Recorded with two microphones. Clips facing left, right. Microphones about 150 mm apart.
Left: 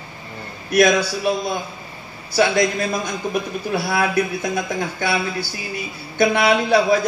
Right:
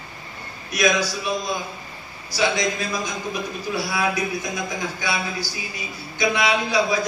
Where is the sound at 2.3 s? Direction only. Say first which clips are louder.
Left 5 dB; 55° left (ahead or behind).